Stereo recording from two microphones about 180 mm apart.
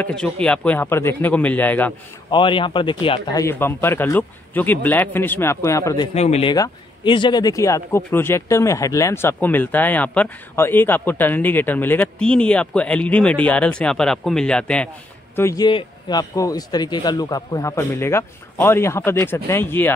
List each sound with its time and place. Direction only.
0.0 s speech: 5° left (ahead or behind)
2.3 s speech: 25° left (ahead or behind)
6.1 s speech: 35° left (ahead or behind)
6.5 s speech: 25° left (ahead or behind); by 14.9 s 5° left (ahead or behind)
15.3 s speech: 20° left (ahead or behind)